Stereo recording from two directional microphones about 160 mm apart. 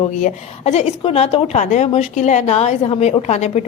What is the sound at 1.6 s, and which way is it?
A woman's voice, 50° left (ahead or behind).